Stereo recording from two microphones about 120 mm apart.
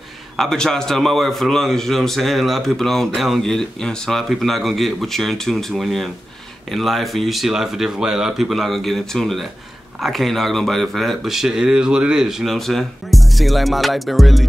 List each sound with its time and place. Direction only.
0.4 s a man's voice: 5° left (ahead or behind)